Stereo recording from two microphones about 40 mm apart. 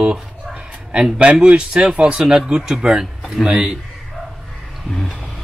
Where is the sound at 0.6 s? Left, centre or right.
Right.